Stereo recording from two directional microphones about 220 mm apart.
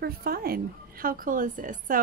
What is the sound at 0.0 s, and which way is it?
A woman's voice, 45° right (ahead or behind).